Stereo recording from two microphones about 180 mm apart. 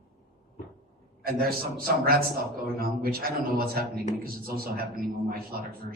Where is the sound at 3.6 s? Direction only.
55° right (ahead or behind).